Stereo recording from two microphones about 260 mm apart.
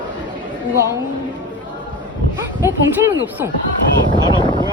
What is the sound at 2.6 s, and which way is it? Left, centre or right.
Speech, centre.